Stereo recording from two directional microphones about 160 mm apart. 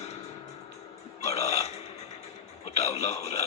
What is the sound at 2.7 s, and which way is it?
Speech, 40° left (ahead or behind).